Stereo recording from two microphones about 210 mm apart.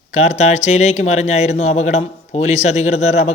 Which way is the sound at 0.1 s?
30° left (ahead or behind).